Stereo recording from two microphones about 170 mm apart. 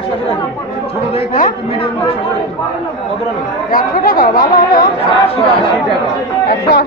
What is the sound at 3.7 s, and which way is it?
Speech, 55° left (ahead or behind).